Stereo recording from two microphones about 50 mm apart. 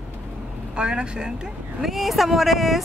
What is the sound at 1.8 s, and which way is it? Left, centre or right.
Speech, centre.